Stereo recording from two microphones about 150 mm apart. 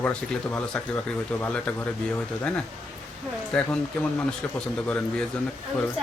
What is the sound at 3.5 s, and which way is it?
Speech, 5° left (ahead or behind).